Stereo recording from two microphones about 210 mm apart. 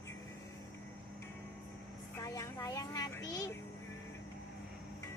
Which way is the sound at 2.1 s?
15° left (ahead or behind).